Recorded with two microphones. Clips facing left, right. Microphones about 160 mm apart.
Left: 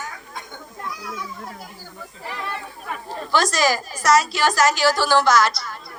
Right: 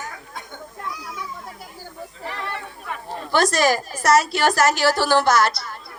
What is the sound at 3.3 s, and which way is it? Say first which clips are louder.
A woman's voice: right 2 dB; 55° right (ahead or behind).